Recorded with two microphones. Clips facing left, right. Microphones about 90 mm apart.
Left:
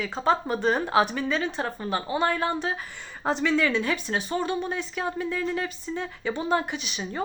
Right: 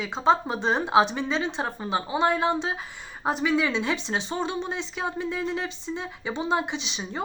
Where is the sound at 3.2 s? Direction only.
10° right (ahead or behind).